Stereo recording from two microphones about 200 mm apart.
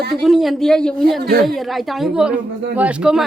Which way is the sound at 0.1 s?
Centre (ahead or behind).